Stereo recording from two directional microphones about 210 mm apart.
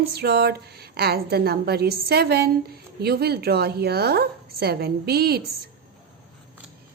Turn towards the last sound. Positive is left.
turn(degrees=-50)  # may be behind; listen again after turning